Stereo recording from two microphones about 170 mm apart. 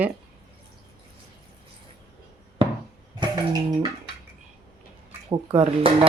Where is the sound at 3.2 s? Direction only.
25° right (ahead or behind).